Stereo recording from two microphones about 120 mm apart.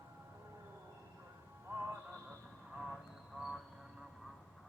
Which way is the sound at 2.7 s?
5° right (ahead or behind).